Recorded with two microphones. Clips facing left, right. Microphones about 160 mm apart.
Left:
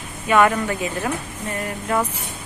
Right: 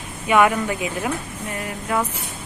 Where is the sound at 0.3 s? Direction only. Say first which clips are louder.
Even; 10° right (ahead or behind).